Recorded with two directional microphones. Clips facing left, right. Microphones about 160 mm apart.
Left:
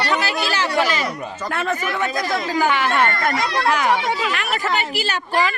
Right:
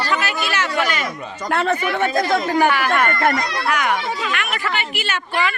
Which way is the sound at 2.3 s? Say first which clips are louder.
Right 2 dB; 55° right (ahead or behind).